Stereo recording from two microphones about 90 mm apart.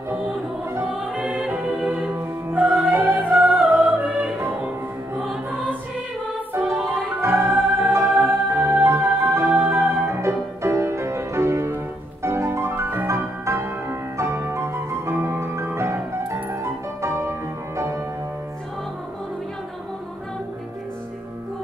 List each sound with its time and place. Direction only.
1.0 s music: 10° right (ahead or behind)
5.2 s music: 5° right (ahead or behind)
6.5 s music: 25° right (ahead or behind)